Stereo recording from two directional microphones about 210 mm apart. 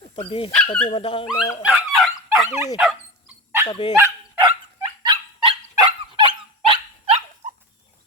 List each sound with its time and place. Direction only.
0.3 s speech: 25° left (ahead or behind)
0.5 s speech: 5° left (ahead or behind)
0.9 s speech: 25° left (ahead or behind)
1.6 s dog: centre (ahead or behind)
3.7 s speech: 20° left (ahead or behind)
4.4 s dog: 25° right (ahead or behind)